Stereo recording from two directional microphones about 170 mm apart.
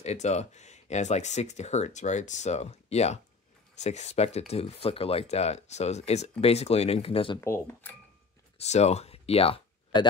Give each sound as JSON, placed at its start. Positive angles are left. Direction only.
{"t": 0.0, "sound": "speech", "side_deg": 40}
{"t": 7.3, "sound": "speech", "side_deg": 15}
{"t": 8.5, "sound": "speech", "side_deg": 40}